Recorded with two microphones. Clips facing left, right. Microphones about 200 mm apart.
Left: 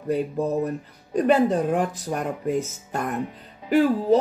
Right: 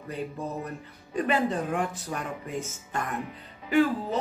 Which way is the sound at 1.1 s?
45° left (ahead or behind).